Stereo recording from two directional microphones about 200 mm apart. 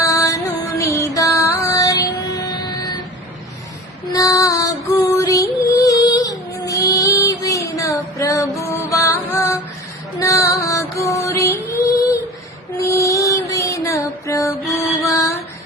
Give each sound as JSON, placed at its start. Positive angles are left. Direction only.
{"t": 0.0, "sound": "music", "side_deg": 15}
{"t": 4.1, "sound": "music", "side_deg": 15}
{"t": 14.6, "sound": "music", "side_deg": 0}
{"t": 14.9, "sound": "female singing", "side_deg": 15}